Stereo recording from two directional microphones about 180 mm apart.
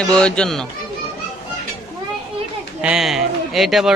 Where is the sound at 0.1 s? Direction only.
5° left (ahead or behind).